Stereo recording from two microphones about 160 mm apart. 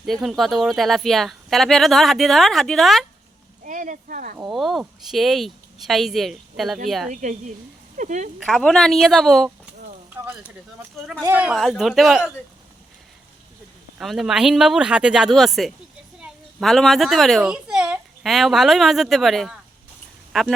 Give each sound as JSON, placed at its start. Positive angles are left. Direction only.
{"t": 0.0, "sound": "speech", "side_deg": 0}
{"t": 3.6, "sound": "speech", "side_deg": -55}
{"t": 4.4, "sound": "speech", "side_deg": 0}
{"t": 7.1, "sound": "speech", "side_deg": -55}
{"t": 7.9, "sound": "a sound", "side_deg": -50}
{"t": 8.4, "sound": "speech", "side_deg": 5}
{"t": 11.3, "sound": "speech", "side_deg": -5}
{"t": 14.0, "sound": "a child's voice", "side_deg": 0}